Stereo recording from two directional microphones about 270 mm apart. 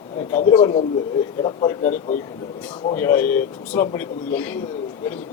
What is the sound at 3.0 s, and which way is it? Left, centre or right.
A man's voice, centre.